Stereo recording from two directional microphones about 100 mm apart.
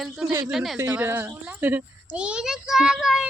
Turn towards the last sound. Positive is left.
turn(degrees=-5)  # may be behind; listen again after turning